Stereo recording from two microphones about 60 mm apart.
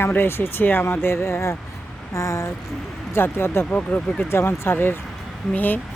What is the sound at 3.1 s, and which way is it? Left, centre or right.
Speech, left.